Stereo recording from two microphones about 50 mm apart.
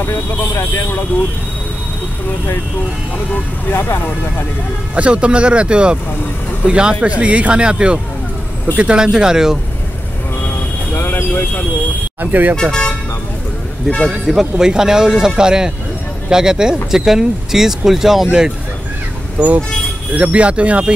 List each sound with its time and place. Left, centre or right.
0.0 s speech: left
3.7 s speech: left
4.9 s speech: right
11.0 s speech: left
12.2 s speech: right
14.0 s speech: centre
19.4 s speech: right